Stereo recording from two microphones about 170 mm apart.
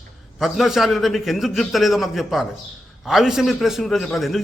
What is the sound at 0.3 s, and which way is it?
A man's voice, centre (ahead or behind).